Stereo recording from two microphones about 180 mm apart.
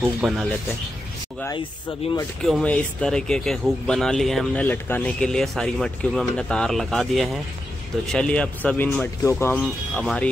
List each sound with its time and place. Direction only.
0.2 s speech: 5° right (ahead or behind)
2.0 s speech: 35° left (ahead or behind)
2.4 s speech: 5° left (ahead or behind)